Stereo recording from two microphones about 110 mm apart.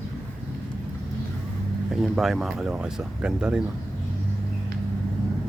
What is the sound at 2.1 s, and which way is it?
Speech, centre (ahead or behind).